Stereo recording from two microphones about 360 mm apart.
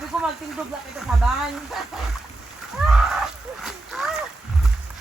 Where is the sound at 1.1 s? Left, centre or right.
Centre.